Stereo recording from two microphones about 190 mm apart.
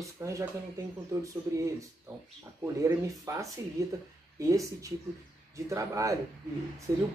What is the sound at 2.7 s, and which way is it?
Speech, 15° right (ahead or behind).